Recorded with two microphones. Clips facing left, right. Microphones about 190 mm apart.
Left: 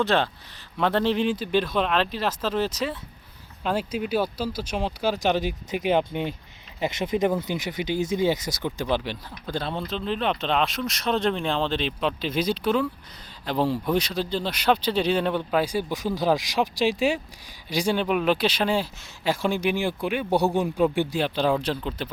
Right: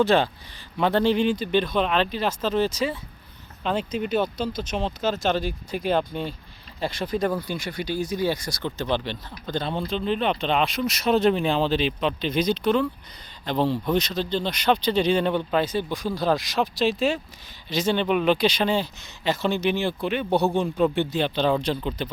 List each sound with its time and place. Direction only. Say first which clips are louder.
0.0 s speech: right 3 dB; centre (ahead or behind)